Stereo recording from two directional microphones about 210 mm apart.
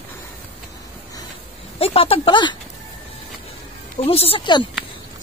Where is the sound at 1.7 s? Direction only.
25° left (ahead or behind).